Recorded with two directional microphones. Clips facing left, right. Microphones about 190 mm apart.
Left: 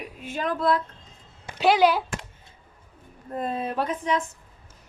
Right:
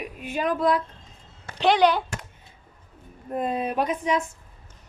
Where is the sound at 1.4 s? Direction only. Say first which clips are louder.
Even; 5° left (ahead or behind).